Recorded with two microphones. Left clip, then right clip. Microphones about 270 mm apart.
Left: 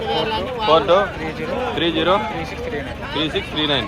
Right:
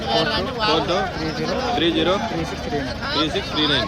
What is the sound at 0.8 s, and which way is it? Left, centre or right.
Speech, centre.